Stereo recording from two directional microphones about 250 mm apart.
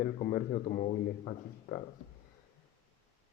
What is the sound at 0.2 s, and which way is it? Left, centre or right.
A man's voice, left.